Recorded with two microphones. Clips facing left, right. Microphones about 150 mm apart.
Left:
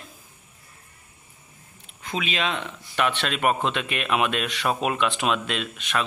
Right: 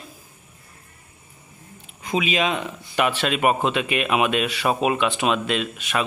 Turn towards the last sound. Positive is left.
turn(degrees=-5)  # may be behind; listen again after turning